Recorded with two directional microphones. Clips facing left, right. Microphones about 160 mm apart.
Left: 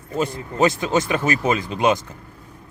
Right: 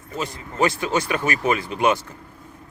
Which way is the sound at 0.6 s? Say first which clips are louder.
Left 3 dB; 20° left (ahead or behind).